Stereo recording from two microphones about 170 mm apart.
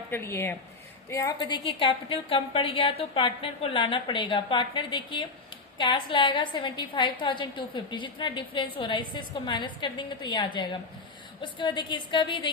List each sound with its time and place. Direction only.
0.1 s a woman's voice: 15° left (ahead or behind)